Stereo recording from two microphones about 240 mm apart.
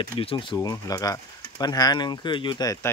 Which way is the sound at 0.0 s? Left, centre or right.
Left.